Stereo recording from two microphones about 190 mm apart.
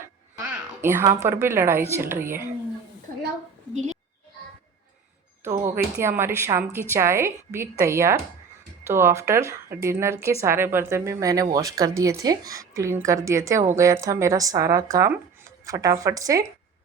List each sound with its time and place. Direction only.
0.3 s a woman's voice: 10° right (ahead or behind)
5.4 s a woman's voice: 15° right (ahead or behind)